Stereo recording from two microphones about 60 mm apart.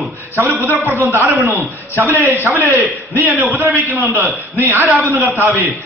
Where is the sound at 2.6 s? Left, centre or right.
Right.